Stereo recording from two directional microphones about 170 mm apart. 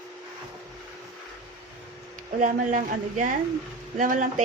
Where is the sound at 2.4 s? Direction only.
50° right (ahead or behind).